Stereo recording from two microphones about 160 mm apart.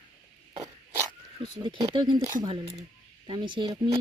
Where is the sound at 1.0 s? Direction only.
25° right (ahead or behind).